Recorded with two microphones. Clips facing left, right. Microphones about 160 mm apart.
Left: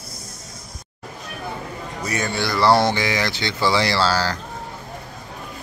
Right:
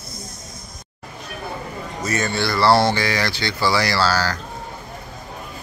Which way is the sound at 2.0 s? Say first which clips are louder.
Right 2 dB; 15° left (ahead or behind).